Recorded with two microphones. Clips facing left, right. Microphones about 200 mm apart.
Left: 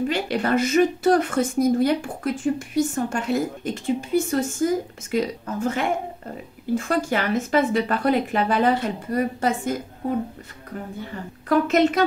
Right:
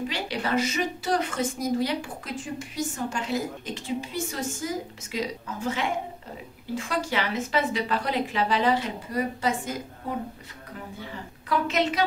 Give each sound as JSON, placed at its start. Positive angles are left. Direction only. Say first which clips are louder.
{"t": 0.1, "sound": "a woman's voice", "louder": "left 6 dB", "side_deg": 50}
{"t": 11.4, "sound": "a woman's voice", "louder": "left 7 dB", "side_deg": 50}